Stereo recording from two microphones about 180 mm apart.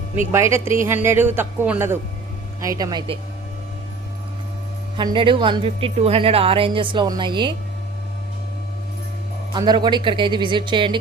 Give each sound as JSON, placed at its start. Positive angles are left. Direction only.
{"t": 0.3, "sound": "a man's voice", "side_deg": -15}
{"t": 4.9, "sound": "a woman's voice", "side_deg": -25}
{"t": 9.5, "sound": "a woman's voice", "side_deg": -25}